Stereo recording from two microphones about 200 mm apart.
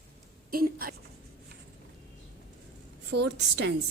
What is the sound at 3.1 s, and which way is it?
Speech, 60° right (ahead or behind).